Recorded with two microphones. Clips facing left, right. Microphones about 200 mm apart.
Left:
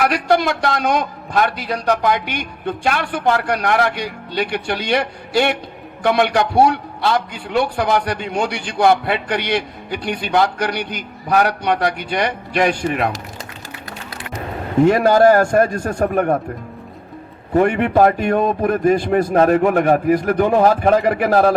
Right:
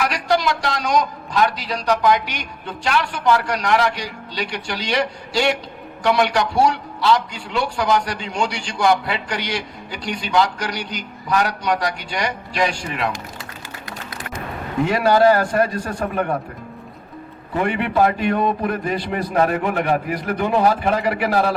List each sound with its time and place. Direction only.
0.0 s a man's voice: 55° left (ahead or behind)
14.8 s a man's voice: 45° left (ahead or behind)
17.5 s a man's voice: 45° left (ahead or behind)